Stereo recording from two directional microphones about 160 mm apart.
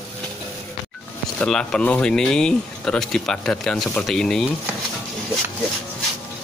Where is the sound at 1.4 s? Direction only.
5° left (ahead or behind).